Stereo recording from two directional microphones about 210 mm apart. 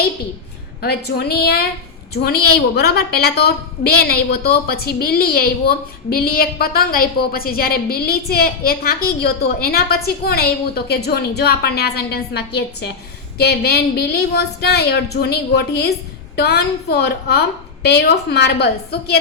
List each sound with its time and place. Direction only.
0.8 s a woman's voice: 50° left (ahead or behind)